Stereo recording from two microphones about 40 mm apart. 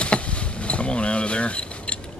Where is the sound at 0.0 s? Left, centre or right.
Left.